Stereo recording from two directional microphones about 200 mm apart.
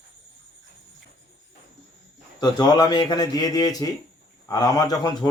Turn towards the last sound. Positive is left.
turn(degrees=20)  # may be behind; listen again after turning